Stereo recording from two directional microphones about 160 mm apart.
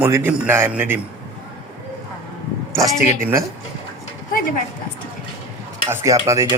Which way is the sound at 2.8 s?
20° right (ahead or behind).